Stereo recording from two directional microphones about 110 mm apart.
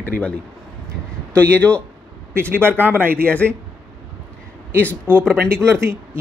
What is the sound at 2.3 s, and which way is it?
Speech, 20° right (ahead or behind).